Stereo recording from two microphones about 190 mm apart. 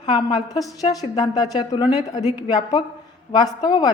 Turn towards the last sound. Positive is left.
turn(degrees=25)  # may be behind; listen again after turning